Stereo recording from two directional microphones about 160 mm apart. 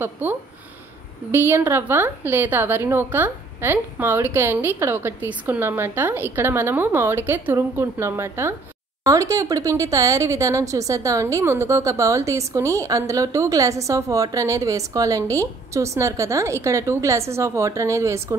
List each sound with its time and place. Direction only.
0.0 s a woman's voice: 10° right (ahead or behind)